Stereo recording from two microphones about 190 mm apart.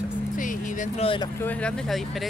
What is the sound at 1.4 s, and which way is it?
Speech, 5° left (ahead or behind).